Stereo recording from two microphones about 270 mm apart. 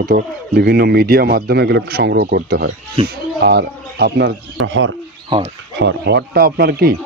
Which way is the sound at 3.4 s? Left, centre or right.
Right.